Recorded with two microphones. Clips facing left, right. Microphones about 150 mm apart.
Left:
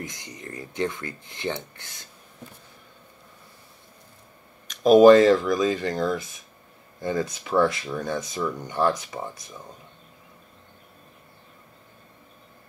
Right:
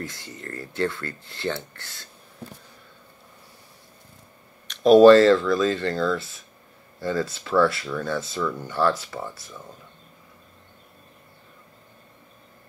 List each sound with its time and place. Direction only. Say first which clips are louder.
0.0 s speech: right 2 dB; 15° left (ahead or behind)
5.0 s speech: even; 15° left (ahead or behind)